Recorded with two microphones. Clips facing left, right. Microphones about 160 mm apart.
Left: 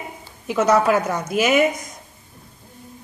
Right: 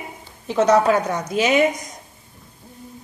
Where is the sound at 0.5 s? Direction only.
5° left (ahead or behind).